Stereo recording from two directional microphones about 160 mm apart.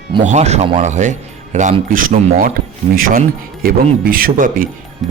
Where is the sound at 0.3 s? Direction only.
45° right (ahead or behind).